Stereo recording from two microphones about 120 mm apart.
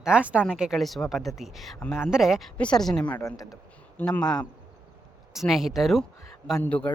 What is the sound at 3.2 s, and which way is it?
Speech, 25° left (ahead or behind).